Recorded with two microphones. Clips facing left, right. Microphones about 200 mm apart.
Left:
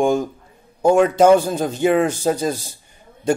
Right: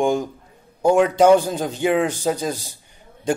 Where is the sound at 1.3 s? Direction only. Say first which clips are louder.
Left 1 dB; 15° right (ahead or behind).